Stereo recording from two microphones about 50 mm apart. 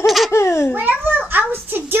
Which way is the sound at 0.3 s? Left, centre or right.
Left.